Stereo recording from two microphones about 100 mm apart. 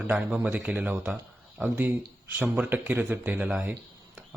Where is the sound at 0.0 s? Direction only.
15° right (ahead or behind).